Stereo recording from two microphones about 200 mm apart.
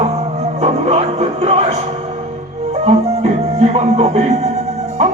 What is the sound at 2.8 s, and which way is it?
Music, 30° right (ahead or behind).